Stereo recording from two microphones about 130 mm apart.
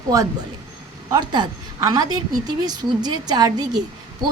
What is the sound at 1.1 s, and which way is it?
A woman's voice, 30° right (ahead or behind).